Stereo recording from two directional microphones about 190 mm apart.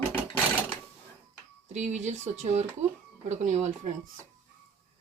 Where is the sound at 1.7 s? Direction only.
35° right (ahead or behind).